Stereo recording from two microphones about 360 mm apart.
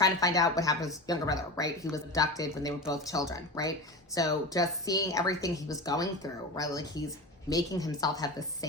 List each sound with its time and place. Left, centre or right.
0.0 s speech: centre